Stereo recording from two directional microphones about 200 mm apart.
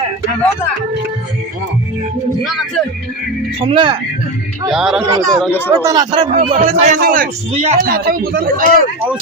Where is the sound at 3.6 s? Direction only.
25° right (ahead or behind).